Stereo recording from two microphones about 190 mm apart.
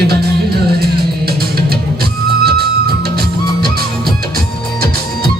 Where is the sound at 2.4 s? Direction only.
55° right (ahead or behind).